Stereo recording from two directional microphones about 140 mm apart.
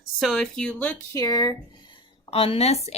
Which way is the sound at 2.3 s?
40° left (ahead or behind).